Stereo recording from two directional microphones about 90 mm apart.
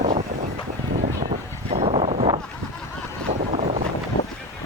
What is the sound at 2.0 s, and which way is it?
Boat, 90° right.